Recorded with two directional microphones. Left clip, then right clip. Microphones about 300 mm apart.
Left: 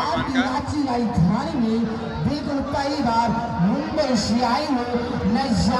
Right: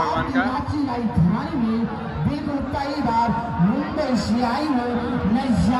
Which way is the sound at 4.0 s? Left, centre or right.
Left.